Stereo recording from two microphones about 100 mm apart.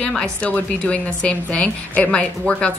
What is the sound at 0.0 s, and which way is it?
A woman's voice, 10° left (ahead or behind).